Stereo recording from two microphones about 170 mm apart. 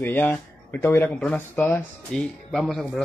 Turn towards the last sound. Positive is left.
turn(degrees=0)  # may be behind; listen again after turning